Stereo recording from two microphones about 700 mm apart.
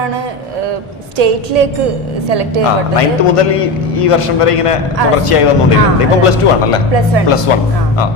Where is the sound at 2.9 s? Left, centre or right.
Left.